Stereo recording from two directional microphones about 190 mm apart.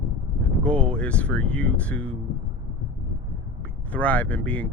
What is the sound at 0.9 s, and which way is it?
Speech, 5° left (ahead or behind).